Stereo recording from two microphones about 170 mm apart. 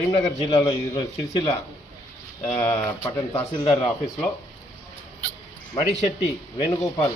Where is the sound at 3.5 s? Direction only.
30° left (ahead or behind).